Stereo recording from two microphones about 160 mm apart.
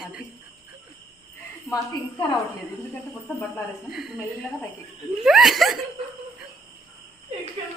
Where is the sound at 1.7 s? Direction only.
25° left (ahead or behind).